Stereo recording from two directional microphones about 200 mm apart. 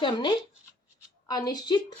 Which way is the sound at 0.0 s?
25° left (ahead or behind).